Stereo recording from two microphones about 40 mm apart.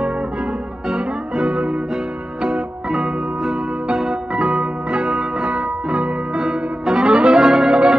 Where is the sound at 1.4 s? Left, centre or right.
Right.